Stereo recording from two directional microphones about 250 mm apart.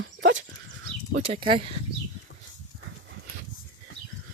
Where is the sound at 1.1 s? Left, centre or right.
Right.